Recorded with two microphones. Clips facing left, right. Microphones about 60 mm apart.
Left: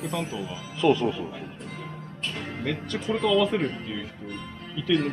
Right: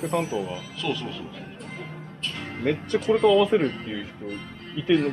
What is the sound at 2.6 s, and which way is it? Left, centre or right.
Speech, right.